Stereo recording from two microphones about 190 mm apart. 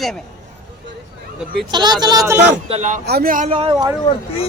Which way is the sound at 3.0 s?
55° right (ahead or behind).